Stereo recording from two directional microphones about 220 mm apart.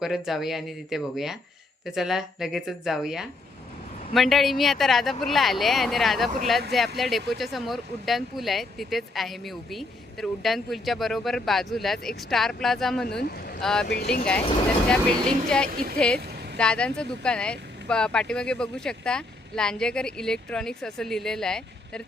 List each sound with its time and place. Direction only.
0.0 s speech: centre (ahead or behind)
13.8 s speech: 50° left (ahead or behind)
15.4 s speech: 5° left (ahead or behind)